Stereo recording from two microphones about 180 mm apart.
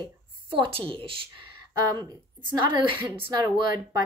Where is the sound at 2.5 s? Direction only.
25° right (ahead or behind).